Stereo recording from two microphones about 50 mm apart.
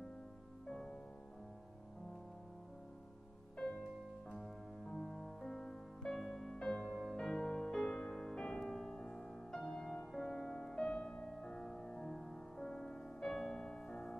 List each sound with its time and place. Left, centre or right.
0.7 s music: centre
5.0 s music: centre
6.5 s music: centre
7.0 s music: centre